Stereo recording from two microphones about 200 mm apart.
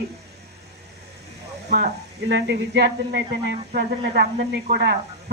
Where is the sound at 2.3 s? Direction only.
60° right (ahead or behind).